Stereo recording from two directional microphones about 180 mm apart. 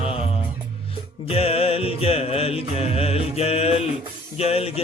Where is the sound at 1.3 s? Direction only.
35° left (ahead or behind).